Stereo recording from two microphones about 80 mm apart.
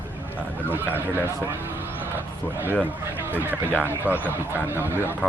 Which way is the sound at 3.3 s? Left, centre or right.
Right.